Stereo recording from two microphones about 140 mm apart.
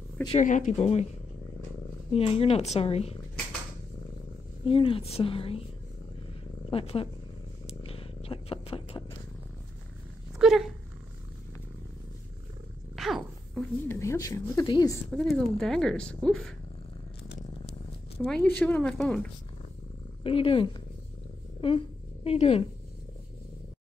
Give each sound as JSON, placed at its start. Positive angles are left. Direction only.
{"t": 0.4, "sound": "speech", "side_deg": 65}
{"t": 0.7, "sound": "speech", "side_deg": 45}
{"t": 2.1, "sound": "speech", "side_deg": 45}
{"t": 4.6, "sound": "a woman's voice", "side_deg": 40}
{"t": 6.7, "sound": "speech", "side_deg": 40}
{"t": 7.8, "sound": "purr", "side_deg": 40}
{"t": 10.4, "sound": "speech", "side_deg": 0}
{"t": 12.9, "sound": "a sound", "side_deg": 0}
{"t": 13.8, "sound": "a woman's voice", "side_deg": 20}
{"t": 15.1, "sound": "speech", "side_deg": 0}
{"t": 18.2, "sound": "speech", "side_deg": 5}
{"t": 20.2, "sound": "a woman's voice", "side_deg": 40}